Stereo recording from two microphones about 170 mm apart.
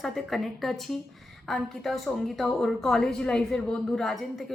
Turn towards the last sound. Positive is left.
turn(degrees=0)  # may be behind; listen again after turning